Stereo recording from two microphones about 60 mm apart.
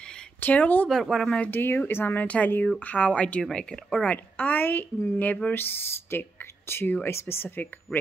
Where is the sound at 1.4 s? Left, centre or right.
Left; by 4.0 s centre.